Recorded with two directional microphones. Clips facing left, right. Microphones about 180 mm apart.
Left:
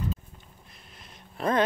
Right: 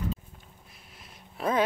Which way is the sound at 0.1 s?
5° right (ahead or behind).